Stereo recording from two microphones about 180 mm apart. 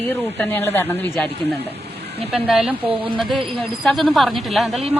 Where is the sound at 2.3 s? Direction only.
5° right (ahead or behind).